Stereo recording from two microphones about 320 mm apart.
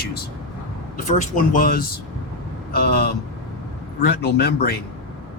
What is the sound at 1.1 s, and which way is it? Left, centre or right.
Speech, left.